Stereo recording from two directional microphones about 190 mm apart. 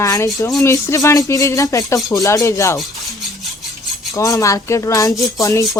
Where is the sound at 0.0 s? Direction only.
15° left (ahead or behind).